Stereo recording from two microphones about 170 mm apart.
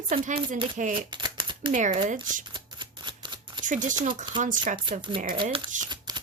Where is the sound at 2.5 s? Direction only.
25° right (ahead or behind).